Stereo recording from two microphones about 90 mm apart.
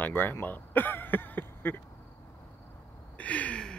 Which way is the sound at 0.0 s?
20° left (ahead or behind).